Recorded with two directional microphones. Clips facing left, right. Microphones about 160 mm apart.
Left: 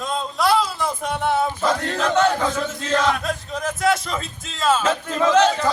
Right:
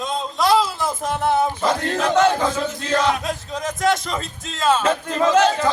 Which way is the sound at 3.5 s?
Centre (ahead or behind).